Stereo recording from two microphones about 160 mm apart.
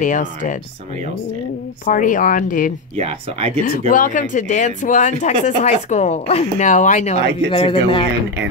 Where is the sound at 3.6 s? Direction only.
60° left (ahead or behind).